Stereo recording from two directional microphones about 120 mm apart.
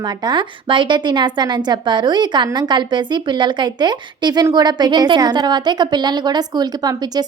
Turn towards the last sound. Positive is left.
turn(degrees=-35)  # may be behind; listen again after turning